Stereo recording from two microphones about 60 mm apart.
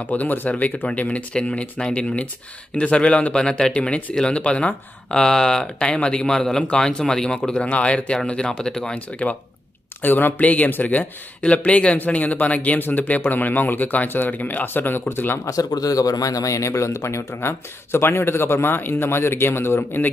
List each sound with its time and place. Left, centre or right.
0.0 s speech: left; by 8.9 s centre
8.9 s speech: left
10.0 s speech: left
15.4 s speech: left
17.4 s a man's voice: left